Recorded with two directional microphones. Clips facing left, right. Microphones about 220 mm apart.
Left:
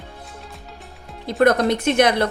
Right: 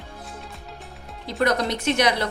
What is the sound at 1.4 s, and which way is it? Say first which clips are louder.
Speech: left 6 dB; 50° left (ahead or behind).